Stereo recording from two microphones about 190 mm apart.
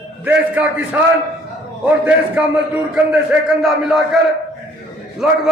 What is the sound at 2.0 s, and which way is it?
A man's voice, 5° right (ahead or behind).